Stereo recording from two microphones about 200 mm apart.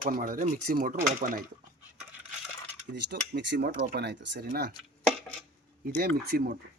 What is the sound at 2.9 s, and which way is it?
Speech, 55° right (ahead or behind).